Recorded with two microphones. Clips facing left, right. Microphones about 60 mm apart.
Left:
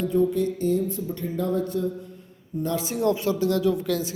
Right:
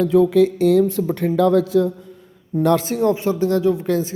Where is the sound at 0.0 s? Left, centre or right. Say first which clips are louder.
Right 8 dB; right.